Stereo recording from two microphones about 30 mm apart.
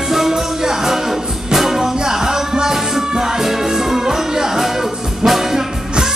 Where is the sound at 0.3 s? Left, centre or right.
Centre.